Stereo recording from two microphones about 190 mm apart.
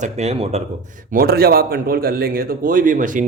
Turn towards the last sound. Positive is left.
turn(degrees=-45)  # may be behind; listen again after turning